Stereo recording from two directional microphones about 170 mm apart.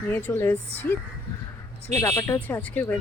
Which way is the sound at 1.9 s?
15° left (ahead or behind).